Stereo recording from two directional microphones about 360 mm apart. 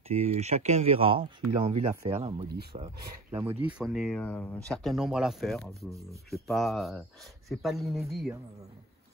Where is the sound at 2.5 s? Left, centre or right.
Right.